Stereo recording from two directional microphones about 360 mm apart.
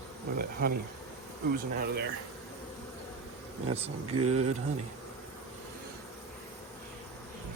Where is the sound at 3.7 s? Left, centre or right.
Centre.